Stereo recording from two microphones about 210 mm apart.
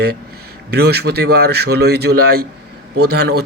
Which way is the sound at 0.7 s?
50° right (ahead or behind).